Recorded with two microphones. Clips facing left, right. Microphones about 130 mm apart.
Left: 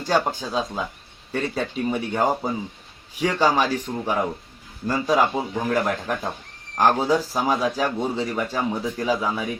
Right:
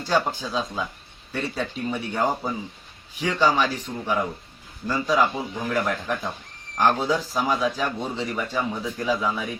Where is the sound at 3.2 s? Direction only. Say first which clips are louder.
Left 1 dB; 40° left (ahead or behind).